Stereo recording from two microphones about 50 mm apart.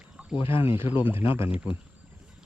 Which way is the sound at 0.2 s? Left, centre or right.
Right.